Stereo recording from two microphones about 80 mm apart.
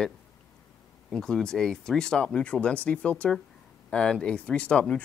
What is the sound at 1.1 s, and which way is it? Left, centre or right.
Speech, centre.